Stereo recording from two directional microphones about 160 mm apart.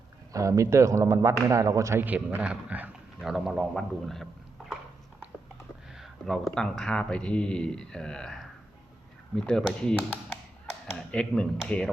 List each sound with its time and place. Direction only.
0.3 s speech: 20° right (ahead or behind); by 4.3 s centre (ahead or behind)
6.0 s speech: centre (ahead or behind)